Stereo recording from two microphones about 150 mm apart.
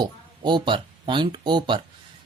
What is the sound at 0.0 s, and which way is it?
Speech, 30° right (ahead or behind).